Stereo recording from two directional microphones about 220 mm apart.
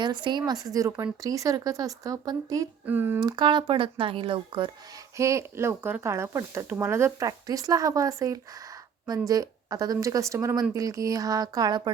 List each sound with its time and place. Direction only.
0.0 s speech: 20° right (ahead or behind)
3.2 s speech: 20° right (ahead or behind)
5.1 s speech: 15° right (ahead or behind)